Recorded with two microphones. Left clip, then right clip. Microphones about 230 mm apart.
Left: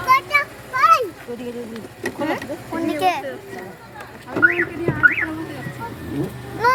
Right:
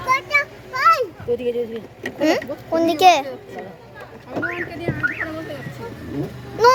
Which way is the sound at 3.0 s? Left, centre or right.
Right.